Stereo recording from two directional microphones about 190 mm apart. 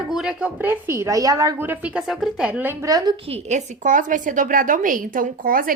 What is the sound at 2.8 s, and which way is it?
A woman's voice, 20° right (ahead or behind).